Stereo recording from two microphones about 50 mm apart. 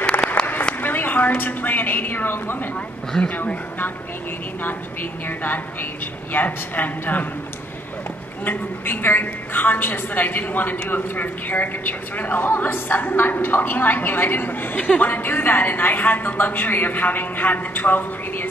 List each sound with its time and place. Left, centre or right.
0.4 s a sound: left
0.7 s a woman's voice: left
3.1 s speech: left
5.4 s a woman's voice: left
8.5 s a woman's voice: left